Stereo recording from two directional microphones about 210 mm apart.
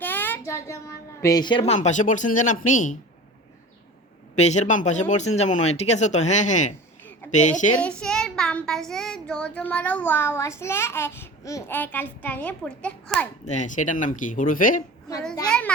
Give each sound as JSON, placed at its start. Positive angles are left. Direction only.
{"t": 0.0, "sound": "a woman's voice", "side_deg": 10}
{"t": 4.4, "sound": "speech", "side_deg": 35}
{"t": 7.8, "sound": "speech", "side_deg": 5}
{"t": 13.4, "sound": "speech", "side_deg": 35}
{"t": 15.4, "sound": "a child's voice", "side_deg": 5}